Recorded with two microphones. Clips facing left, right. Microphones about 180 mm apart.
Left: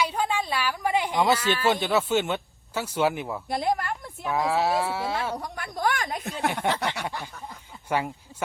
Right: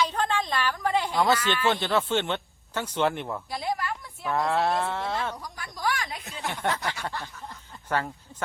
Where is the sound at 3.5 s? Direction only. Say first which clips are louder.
Left 6 dB; 50° left (ahead or behind).